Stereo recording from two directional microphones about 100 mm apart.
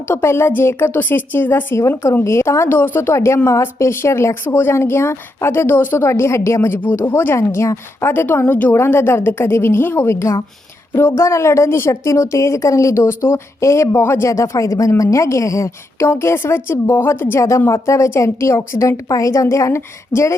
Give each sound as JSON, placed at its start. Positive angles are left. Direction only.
{"t": 0.1, "sound": "a woman's voice", "side_deg": 25}